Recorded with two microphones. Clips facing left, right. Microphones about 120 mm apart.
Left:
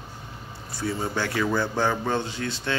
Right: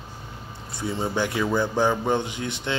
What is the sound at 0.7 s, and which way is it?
Speech, 20° right (ahead or behind).